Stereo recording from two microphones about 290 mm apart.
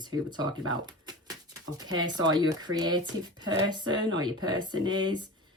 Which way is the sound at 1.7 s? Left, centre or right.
Centre.